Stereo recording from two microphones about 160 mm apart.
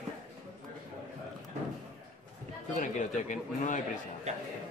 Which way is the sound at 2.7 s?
50° left (ahead or behind).